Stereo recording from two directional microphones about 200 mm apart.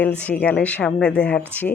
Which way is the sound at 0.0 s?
10° left (ahead or behind).